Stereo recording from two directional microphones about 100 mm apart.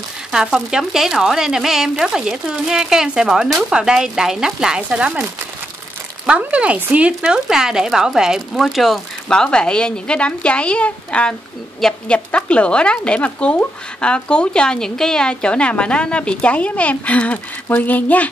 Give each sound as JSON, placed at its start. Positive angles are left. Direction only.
{"t": 0.3, "sound": "speech", "side_deg": -5}
{"t": 6.2, "sound": "speech", "side_deg": -10}